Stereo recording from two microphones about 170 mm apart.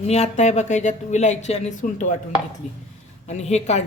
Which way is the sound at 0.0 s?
40° left (ahead or behind).